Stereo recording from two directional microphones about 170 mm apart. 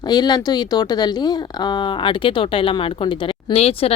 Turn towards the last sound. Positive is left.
turn(degrees=35)  # may be behind; listen again after turning